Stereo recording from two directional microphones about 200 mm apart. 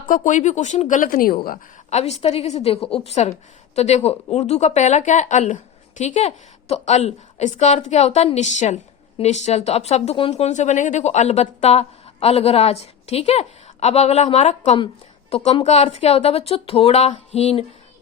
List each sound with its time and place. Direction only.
0.1 s a woman's voice: 40° left (ahead or behind)
1.9 s a woman's voice: 35° left (ahead or behind)